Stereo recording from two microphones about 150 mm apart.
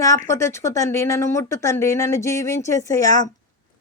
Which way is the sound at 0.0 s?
20° left (ahead or behind).